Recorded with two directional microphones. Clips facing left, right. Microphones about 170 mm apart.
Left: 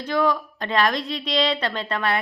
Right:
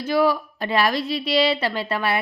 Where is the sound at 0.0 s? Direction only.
10° right (ahead or behind).